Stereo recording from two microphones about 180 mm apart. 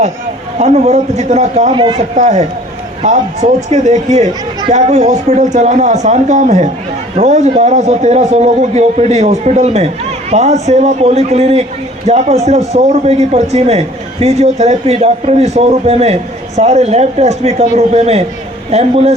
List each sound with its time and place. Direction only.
0.6 s a man's voice: 35° right (ahead or behind)
2.0 s a man's voice: 40° right (ahead or behind)